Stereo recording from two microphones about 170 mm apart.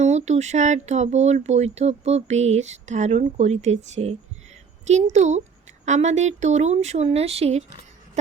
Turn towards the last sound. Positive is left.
turn(degrees=-40)  # may be behind; listen again after turning